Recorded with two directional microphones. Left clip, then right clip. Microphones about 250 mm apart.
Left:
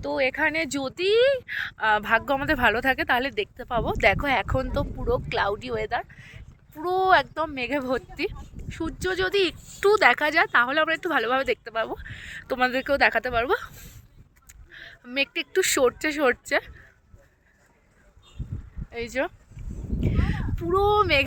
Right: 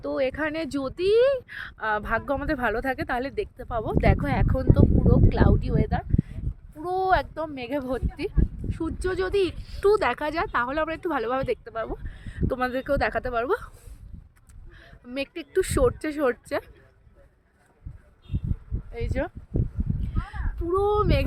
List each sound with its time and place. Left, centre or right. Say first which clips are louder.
0.0 s speech: left 3 dB; centre
8.7 s speech: left 1 dB; centre
18.9 s speech: left 3 dB; left
20.0 s a sound: left 8 dB; centre